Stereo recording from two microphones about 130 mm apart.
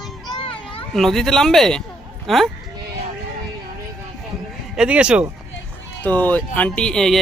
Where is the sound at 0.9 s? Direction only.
Centre (ahead or behind).